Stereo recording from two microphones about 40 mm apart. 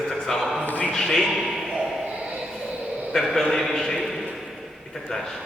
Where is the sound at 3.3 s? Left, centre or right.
Centre.